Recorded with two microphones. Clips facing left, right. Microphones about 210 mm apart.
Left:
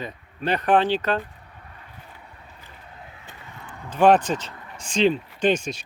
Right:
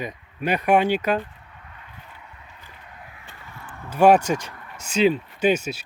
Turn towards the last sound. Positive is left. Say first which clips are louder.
# right 1 dB
turn(degrees=-5)  # may be behind; listen again after turning